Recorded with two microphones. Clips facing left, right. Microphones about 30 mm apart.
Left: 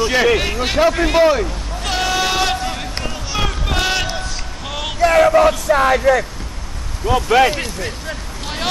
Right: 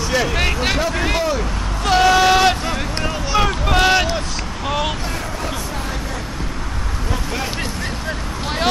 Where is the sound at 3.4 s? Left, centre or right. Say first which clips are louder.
Right 3 dB; centre.